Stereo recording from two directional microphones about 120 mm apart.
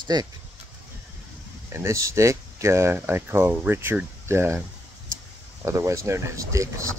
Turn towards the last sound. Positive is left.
turn(degrees=-25)  # may be behind; listen again after turning